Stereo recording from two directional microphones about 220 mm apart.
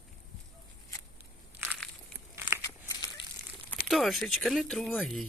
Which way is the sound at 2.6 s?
15° left (ahead or behind).